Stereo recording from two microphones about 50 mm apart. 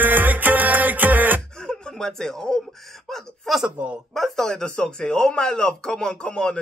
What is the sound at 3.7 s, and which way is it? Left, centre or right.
Speech, right.